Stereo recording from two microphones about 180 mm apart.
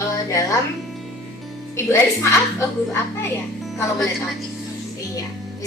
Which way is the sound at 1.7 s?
15° left (ahead or behind).